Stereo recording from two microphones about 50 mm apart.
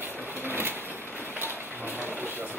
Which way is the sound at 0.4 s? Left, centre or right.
Right.